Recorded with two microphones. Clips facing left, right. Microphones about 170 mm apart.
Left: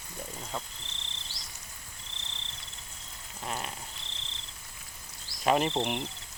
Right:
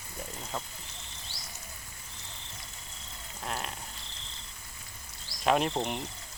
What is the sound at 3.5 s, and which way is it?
Cricket, centre (ahead or behind).